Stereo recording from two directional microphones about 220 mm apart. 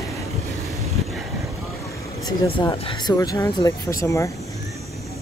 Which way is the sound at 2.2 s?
20° left (ahead or behind).